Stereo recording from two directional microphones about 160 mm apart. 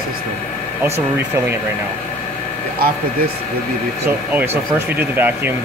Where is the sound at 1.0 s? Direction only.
15° right (ahead or behind).